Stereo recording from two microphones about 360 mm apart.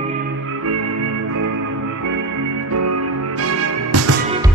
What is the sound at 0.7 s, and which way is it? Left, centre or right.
Music, right.